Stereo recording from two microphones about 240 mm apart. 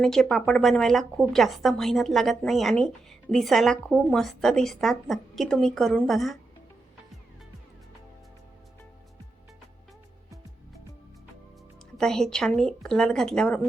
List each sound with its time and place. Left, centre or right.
0.0 s a woman's voice: centre
11.9 s a woman's voice: centre